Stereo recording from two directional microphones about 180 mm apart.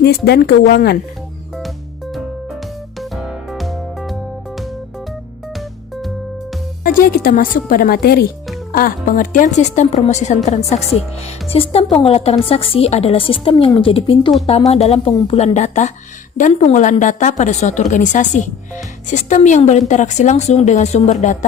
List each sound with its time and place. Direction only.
0.3 s speech: 65° left (ahead or behind)
3.0 s music: centre (ahead or behind)
6.8 s a woman's voice: 55° left (ahead or behind)